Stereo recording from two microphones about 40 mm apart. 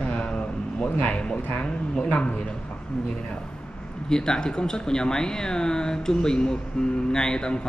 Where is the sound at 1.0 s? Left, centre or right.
Left.